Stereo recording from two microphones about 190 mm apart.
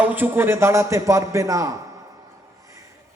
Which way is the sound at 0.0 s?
10° right (ahead or behind).